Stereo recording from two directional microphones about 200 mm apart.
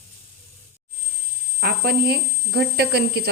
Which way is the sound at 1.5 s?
50° right (ahead or behind).